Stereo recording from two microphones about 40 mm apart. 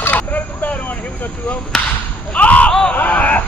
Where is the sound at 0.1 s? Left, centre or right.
Left.